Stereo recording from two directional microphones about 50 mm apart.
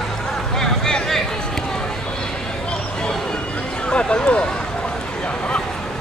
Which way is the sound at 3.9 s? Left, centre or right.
Centre.